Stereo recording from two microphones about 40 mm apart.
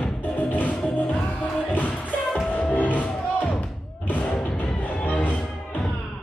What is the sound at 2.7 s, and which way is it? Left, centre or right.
Music, left.